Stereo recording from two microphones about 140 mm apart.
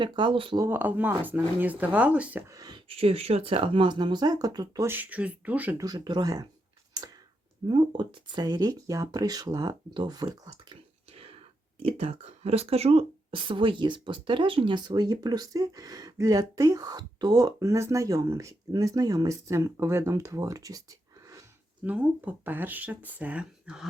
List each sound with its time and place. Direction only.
0.0 s speech: 35° right (ahead or behind)
0.6 s speech: 15° right (ahead or behind)
2.5 s speech: 30° right (ahead or behind)
2.9 s speech: 45° right (ahead or behind); by 4.9 s 30° right (ahead or behind)
4.9 s speech: 10° right (ahead or behind)
5.7 s speech: 25° right (ahead or behind)
7.7 s speech: 35° right (ahead or behind)
11.1 s whispering: 45° right (ahead or behind)
11.8 s speech: 45° right (ahead or behind); by 20.8 s 25° right (ahead or behind)
21.8 s speech: 10° right (ahead or behind)